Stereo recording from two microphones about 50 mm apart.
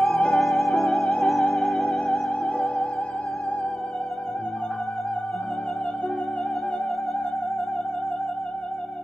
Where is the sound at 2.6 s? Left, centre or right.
Centre.